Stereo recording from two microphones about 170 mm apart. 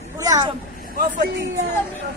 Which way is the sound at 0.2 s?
20° right (ahead or behind).